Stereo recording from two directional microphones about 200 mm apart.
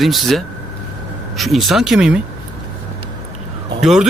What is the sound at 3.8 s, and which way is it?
Speech, centre (ahead or behind).